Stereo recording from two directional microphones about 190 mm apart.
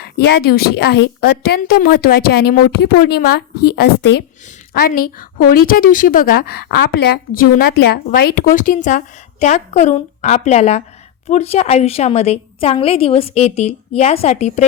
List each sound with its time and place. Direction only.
0.2 s a woman's voice: 55° left (ahead or behind); by 14.6 s 35° left (ahead or behind)